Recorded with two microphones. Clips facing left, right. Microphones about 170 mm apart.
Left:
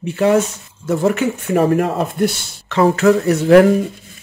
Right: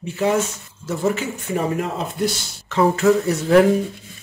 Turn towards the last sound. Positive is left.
turn(degrees=70)  # may be behind; listen again after turning